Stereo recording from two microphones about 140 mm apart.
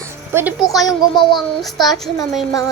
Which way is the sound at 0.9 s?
35° left (ahead or behind).